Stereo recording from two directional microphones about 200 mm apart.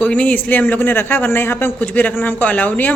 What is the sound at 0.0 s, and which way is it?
A man's voice, 5° left (ahead or behind).